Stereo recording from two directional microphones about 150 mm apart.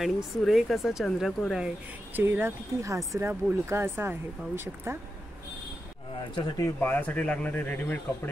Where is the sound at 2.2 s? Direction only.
15° right (ahead or behind).